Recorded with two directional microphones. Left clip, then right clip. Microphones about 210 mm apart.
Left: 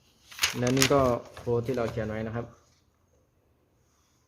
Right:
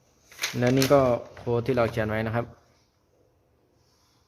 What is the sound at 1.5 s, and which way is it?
Speech, 25° right (ahead or behind).